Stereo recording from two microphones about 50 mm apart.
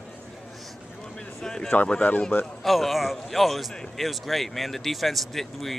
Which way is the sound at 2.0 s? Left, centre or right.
Left.